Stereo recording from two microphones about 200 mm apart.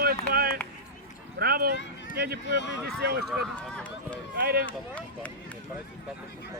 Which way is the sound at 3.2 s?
5° left (ahead or behind).